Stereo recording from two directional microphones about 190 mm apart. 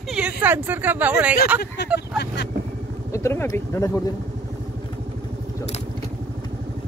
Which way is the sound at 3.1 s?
15° left (ahead or behind).